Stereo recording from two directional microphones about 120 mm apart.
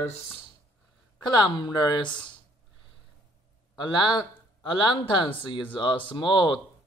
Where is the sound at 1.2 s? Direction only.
35° left (ahead or behind).